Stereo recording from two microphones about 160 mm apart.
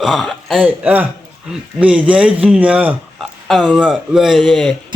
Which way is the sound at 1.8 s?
5° right (ahead or behind).